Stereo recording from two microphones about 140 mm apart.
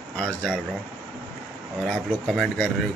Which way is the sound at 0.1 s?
5° left (ahead or behind).